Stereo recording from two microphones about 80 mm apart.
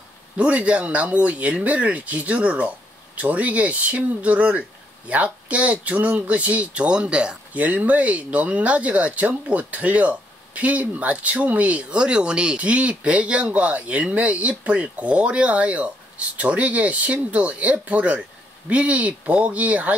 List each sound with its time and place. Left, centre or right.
0.4 s speech: centre